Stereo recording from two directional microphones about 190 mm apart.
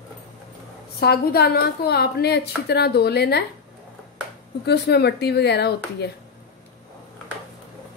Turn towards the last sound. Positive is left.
turn(degrees=60)  # may be behind; listen again after turning